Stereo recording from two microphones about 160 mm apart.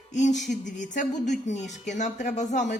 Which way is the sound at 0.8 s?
50° left (ahead or behind).